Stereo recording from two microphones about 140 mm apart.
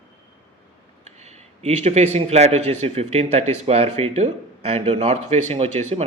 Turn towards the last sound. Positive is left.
turn(degrees=-45)  # may be behind; listen again after turning